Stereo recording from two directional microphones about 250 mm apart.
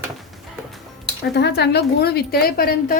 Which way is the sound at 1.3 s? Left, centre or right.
Left.